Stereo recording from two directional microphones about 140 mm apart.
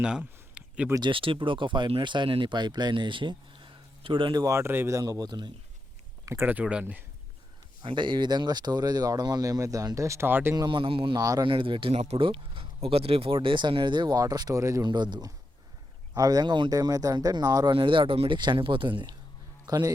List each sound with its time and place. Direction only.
0.0 s a sound: 5° right (ahead or behind)
0.9 s speech: 35° right (ahead or behind)
6.2 s speech: 15° right (ahead or behind)
7.8 s speech: 35° right (ahead or behind); by 10.5 s 15° right (ahead or behind)
10.5 s speech: 30° right (ahead or behind)
11.2 s speech: 25° right (ahead or behind)
11.4 s a man's voice: 35° right (ahead or behind)